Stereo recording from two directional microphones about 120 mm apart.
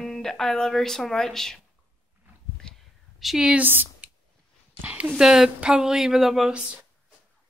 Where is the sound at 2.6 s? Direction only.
Centre (ahead or behind).